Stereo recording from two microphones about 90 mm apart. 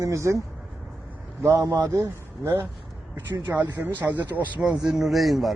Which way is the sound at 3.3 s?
35° right (ahead or behind).